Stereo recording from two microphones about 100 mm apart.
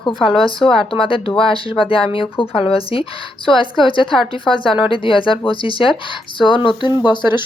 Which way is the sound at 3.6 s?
55° left (ahead or behind).